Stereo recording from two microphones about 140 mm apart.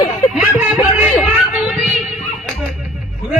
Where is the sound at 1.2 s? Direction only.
10° right (ahead or behind).